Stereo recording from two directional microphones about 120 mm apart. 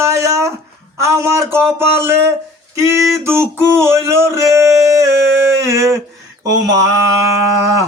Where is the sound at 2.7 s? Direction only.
25° right (ahead or behind).